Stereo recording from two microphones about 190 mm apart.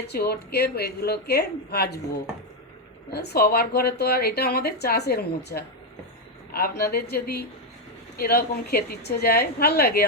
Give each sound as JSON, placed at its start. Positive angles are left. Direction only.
{"t": 0.1, "sound": "speech", "side_deg": 55}
{"t": 3.1, "sound": "speech", "side_deg": 55}